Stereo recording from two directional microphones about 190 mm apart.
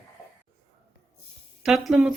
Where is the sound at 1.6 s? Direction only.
Centre (ahead or behind).